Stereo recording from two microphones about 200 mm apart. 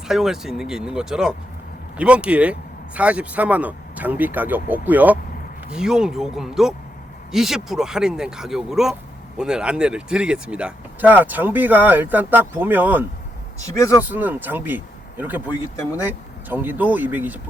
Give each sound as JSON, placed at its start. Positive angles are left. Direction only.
{"t": 0.1, "sound": "speech", "side_deg": 0}
{"t": 13.7, "sound": "speech", "side_deg": 15}
{"t": 14.0, "sound": "speech", "side_deg": -10}